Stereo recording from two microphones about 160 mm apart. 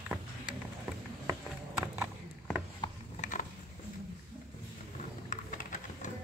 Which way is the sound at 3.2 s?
55° left (ahead or behind).